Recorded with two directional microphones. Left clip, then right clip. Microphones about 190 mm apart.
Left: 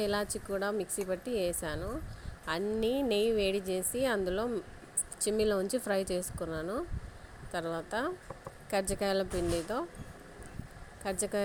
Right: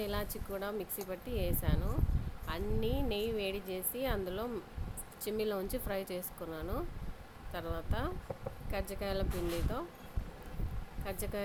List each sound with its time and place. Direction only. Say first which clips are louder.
0.0 s speech: left 6 dB; 30° left (ahead or behind)
11.0 s speech: left 7 dB; 25° left (ahead or behind)